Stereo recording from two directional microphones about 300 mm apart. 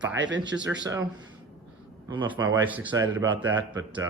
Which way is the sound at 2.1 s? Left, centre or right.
Centre.